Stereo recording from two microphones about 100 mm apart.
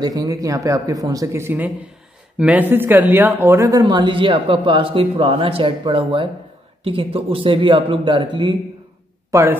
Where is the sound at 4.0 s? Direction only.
55° right (ahead or behind).